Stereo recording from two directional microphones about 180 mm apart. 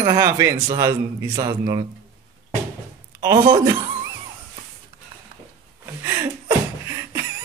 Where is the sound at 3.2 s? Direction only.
20° right (ahead or behind).